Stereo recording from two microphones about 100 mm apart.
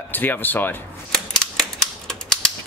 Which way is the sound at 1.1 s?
5° left (ahead or behind).